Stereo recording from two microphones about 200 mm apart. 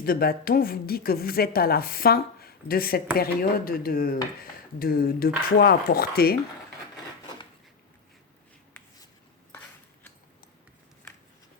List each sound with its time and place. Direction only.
0.0 s a woman's voice: 50° left (ahead or behind)